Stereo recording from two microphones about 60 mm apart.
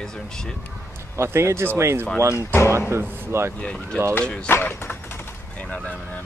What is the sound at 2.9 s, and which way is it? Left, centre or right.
Speech, right.